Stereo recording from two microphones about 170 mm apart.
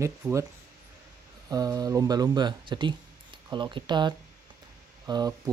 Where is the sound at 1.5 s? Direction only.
20° right (ahead or behind).